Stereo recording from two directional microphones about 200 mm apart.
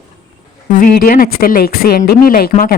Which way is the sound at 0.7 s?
45° left (ahead or behind).